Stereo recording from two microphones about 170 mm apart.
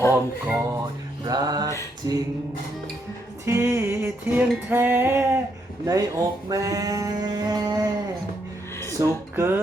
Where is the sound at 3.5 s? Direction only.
15° right (ahead or behind).